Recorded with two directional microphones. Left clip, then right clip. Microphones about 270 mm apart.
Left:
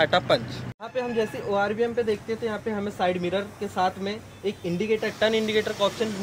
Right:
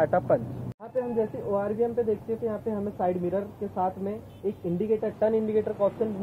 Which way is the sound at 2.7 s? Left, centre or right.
Left.